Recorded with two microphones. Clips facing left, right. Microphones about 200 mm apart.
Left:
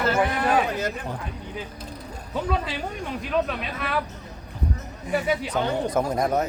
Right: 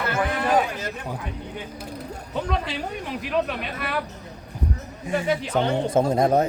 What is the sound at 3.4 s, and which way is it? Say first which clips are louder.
Speech: even; 5° right (ahead or behind).